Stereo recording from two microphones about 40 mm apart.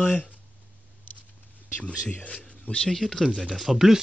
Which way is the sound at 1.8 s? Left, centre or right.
Left.